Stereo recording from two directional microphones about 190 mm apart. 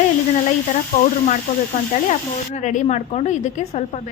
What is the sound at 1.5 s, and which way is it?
A woman's voice, 40° left (ahead or behind).